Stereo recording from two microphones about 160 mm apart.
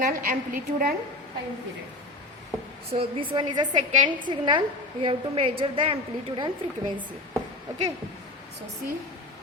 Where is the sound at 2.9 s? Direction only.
35° right (ahead or behind).